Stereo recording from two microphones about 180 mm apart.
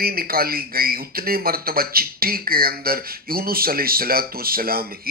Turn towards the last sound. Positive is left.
turn(degrees=-55)  # may be behind; listen again after turning